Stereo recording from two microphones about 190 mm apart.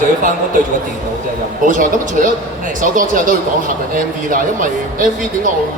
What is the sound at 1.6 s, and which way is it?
Speech, 45° right (ahead or behind).